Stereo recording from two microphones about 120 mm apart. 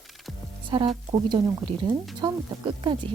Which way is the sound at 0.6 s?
45° right (ahead or behind).